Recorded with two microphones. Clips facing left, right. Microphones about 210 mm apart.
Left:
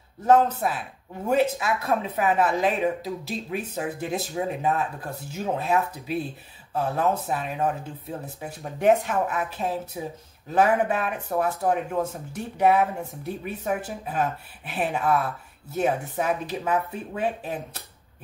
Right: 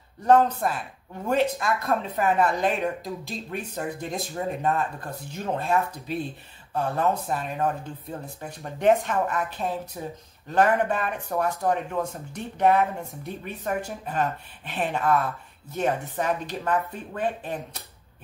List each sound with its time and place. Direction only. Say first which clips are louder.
0.2 s speech: even; 5° left (ahead or behind)